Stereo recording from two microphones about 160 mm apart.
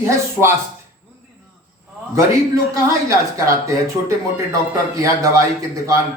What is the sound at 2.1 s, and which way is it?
A man's voice, 20° right (ahead or behind).